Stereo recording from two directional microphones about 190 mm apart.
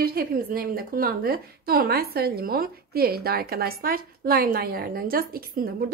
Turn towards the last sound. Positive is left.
turn(degrees=-50)  # may be behind; listen again after turning